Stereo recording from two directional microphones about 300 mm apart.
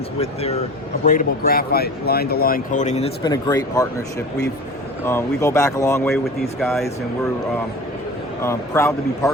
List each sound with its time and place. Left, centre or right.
0.2 s speech: centre
5.0 s speech: centre
8.4 s speech: centre